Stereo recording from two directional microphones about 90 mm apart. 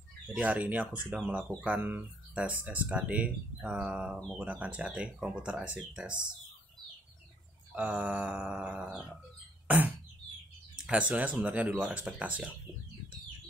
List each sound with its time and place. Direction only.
0.3 s speech: 15° right (ahead or behind)
7.7 s speech: 20° right (ahead or behind)
10.9 s speech: 15° right (ahead or behind)